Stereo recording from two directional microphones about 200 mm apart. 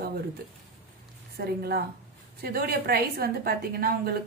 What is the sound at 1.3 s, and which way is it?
A woman's voice, 50° right (ahead or behind).